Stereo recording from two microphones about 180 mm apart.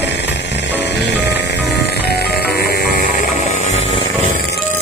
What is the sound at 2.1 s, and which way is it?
Music, 60° left (ahead or behind).